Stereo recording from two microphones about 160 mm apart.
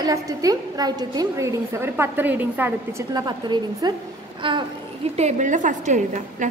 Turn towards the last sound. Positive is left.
turn(degrees=-50)  # may be behind; listen again after turning